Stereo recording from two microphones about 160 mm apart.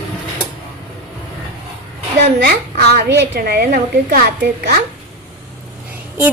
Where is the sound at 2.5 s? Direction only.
70° right (ahead or behind).